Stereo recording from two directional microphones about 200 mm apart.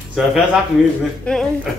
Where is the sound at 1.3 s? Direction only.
5° left (ahead or behind).